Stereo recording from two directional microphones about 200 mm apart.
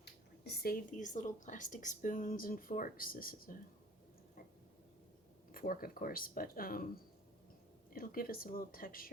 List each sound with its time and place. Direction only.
0.0 s speech: 55° left (ahead or behind)
5.5 s speech: 45° left (ahead or behind)
7.9 s speech: 45° left (ahead or behind)